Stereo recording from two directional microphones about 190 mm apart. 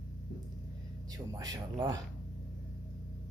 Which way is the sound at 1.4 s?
20° right (ahead or behind).